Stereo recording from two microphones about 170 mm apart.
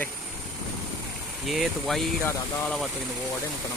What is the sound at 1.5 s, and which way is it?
Speech, centre (ahead or behind).